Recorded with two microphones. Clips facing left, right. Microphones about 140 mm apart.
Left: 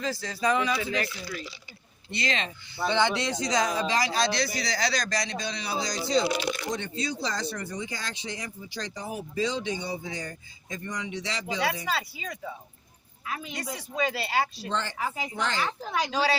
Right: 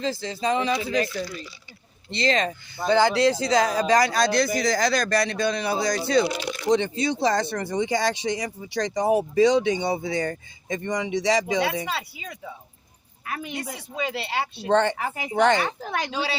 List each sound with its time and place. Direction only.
0.0 s speech: 25° right (ahead or behind)
2.1 s a man's voice: 35° right (ahead or behind); by 6.2 s 60° right (ahead or behind)
6.7 s speech: 90° right
13.2 s a woman's voice: 60° right (ahead or behind)
13.9 s speech: 25° right (ahead or behind)
14.5 s a woman's voice: 65° right (ahead or behind)